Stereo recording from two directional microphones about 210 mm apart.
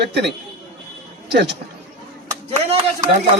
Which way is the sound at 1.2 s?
55° right (ahead or behind).